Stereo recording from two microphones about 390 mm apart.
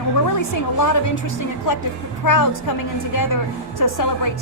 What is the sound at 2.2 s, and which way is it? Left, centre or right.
Speech, left.